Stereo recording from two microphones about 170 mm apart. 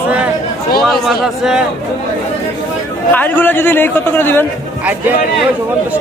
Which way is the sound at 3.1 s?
10° left (ahead or behind).